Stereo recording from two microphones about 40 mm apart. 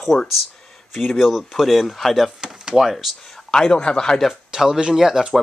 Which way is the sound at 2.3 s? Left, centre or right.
Centre.